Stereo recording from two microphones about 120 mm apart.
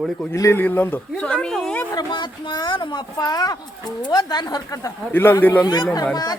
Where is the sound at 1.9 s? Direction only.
35° left (ahead or behind).